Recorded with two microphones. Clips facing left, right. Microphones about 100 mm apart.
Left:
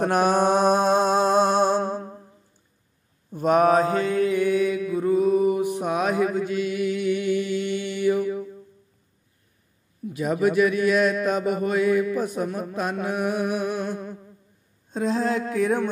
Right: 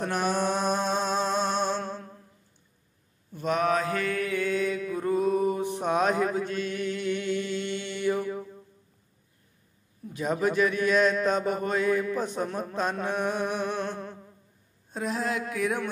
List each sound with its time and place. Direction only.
0.0 s mantra: 55° left (ahead or behind); by 2.2 s 35° left (ahead or behind)
3.3 s mantra: 50° left (ahead or behind)
3.9 s mantra: 25° left (ahead or behind); by 8.5 s 5° left (ahead or behind)
10.1 s a man's voice: 10° left (ahead or behind)
14.9 s a sound: 25° left (ahead or behind)